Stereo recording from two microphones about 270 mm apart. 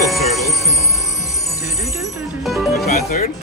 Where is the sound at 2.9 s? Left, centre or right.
Left.